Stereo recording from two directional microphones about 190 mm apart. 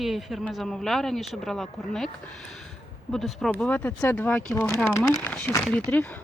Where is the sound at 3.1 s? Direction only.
Centre (ahead or behind).